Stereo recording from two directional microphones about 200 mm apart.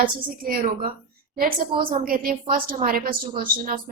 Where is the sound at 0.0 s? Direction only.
45° right (ahead or behind).